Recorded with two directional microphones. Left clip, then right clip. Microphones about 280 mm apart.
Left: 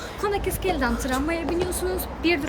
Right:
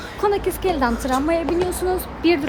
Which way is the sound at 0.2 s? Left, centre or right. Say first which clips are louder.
Right 6 dB; centre.